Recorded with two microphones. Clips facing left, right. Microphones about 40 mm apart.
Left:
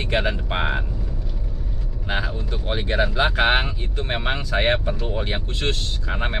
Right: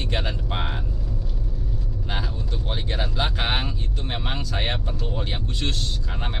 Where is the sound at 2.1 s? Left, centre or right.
Left.